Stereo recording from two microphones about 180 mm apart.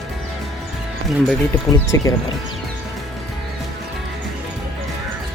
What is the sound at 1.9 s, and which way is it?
Speech, 15° left (ahead or behind).